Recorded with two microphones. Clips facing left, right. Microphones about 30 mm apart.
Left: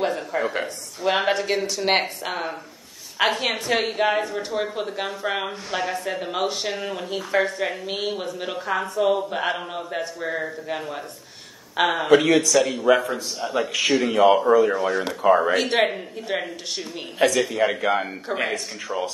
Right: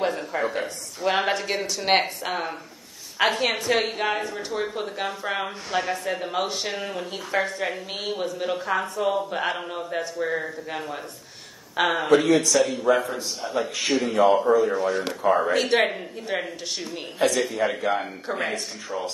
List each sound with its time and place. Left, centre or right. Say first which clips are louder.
0.0 s a sound: left 1 dB; centre
1.0 s a woman's voice: left 2 dB; centre
12.2 s a man's voice: left 1 dB; left
15.5 s a woman's voice: left 1 dB; centre
17.4 s a man's voice: left 3 dB; left
18.3 s speech: left 2 dB; centre